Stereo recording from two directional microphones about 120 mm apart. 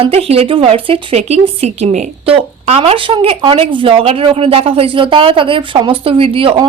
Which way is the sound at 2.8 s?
45° right (ahead or behind).